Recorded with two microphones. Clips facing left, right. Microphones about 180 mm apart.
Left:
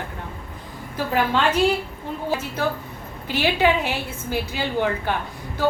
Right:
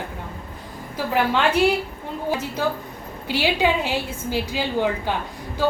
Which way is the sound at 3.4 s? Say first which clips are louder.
Left 1 dB; 15° right (ahead or behind).